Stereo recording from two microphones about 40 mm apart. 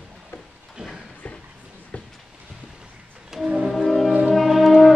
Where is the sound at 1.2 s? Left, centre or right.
Left.